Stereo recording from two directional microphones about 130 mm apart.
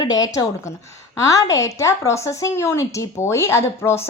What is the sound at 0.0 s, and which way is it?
A woman's voice, 30° left (ahead or behind).